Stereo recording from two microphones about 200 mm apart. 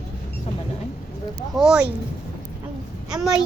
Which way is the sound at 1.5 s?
5° right (ahead or behind).